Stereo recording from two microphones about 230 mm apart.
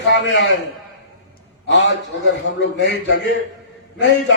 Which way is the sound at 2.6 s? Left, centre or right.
Left.